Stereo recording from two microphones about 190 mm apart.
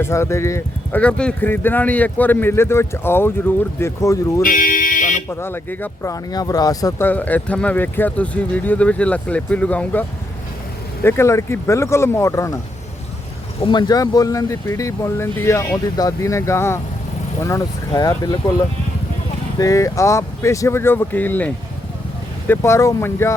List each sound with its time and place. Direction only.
0.0 s speech: 15° left (ahead or behind)
4.4 s speech: 45° left (ahead or behind)
5.3 s speech: 10° left (ahead or behind)
13.6 s speech: 25° left (ahead or behind)
19.5 s speech: 15° left (ahead or behind)